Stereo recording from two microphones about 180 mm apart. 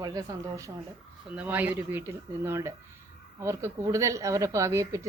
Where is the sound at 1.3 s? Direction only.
10° right (ahead or behind).